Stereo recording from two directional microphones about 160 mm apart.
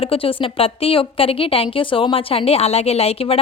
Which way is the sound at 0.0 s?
35° left (ahead or behind).